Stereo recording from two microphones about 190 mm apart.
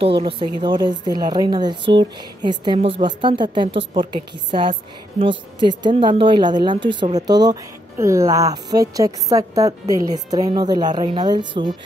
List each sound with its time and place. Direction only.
0.2 s a woman's voice: 25° right (ahead or behind)